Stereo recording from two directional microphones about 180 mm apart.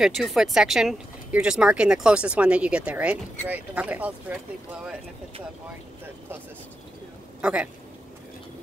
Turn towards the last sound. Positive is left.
turn(degrees=-5)  # may be behind; listen again after turning